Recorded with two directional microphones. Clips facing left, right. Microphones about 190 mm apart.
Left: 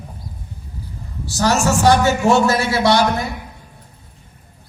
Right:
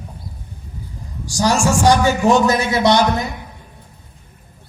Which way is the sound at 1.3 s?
15° right (ahead or behind).